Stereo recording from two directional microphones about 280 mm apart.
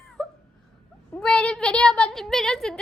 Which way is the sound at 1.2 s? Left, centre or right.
Centre.